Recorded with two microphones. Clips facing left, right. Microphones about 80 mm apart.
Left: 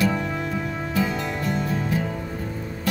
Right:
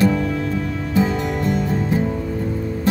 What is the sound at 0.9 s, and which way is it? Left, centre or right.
Music, right.